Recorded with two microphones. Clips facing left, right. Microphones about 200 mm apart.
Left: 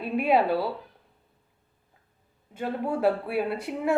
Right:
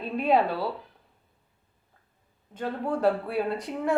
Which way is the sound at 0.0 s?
10° left (ahead or behind).